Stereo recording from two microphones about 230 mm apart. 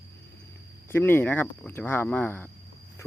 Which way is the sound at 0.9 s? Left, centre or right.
Centre.